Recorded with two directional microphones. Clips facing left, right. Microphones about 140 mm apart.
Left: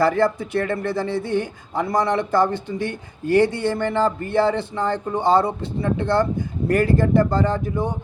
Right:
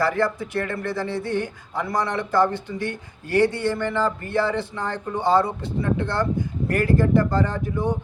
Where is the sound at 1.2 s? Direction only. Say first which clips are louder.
Left 2 dB; 20° left (ahead or behind).